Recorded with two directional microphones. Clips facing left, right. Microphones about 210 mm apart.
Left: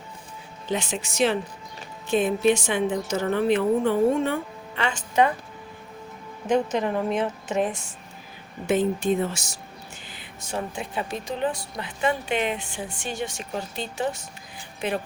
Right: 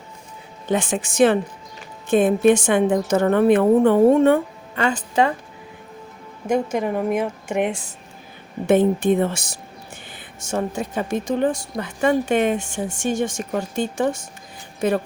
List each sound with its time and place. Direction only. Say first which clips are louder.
0.7 s speech: right 6 dB; 50° right (ahead or behind); by 5.3 s 35° right (ahead or behind)
6.5 s a woman's voice: right 2 dB; 10° right (ahead or behind)
8.6 s speech: right 6 dB; 55° right (ahead or behind)
10.4 s speech: right 7 dB; 45° right (ahead or behind)